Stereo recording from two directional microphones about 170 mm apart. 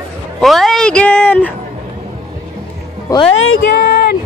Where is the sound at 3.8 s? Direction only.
70° left (ahead or behind).